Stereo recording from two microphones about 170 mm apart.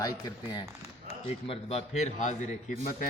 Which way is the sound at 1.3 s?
35° left (ahead or behind).